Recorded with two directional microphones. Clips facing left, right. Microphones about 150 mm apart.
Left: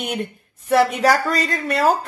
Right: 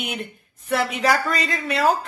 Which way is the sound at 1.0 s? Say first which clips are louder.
Left 3 dB; 40° left (ahead or behind).